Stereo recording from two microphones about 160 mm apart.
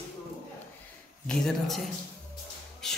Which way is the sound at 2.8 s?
5° left (ahead or behind).